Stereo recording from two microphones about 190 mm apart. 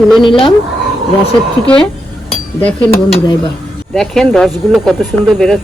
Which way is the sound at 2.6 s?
10° left (ahead or behind).